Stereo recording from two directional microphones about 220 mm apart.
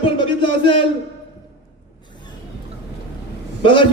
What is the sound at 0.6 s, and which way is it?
Speech, 25° left (ahead or behind).